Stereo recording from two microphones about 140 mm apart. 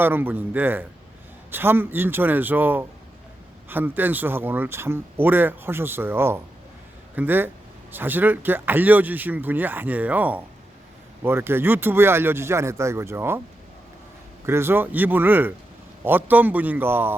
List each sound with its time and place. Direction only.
0.0 s speech: 15° right (ahead or behind)
14.4 s speech: 15° right (ahead or behind)